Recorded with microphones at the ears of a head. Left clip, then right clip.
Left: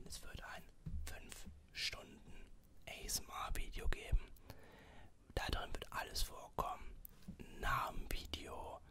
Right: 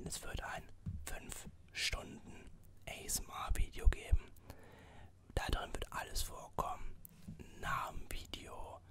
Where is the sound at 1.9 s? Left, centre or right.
Right.